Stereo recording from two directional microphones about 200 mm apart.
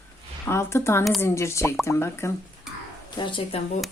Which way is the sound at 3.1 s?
25° left (ahead or behind).